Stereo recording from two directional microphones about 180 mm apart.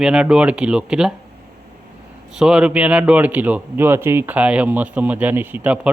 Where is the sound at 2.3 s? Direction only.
5° right (ahead or behind).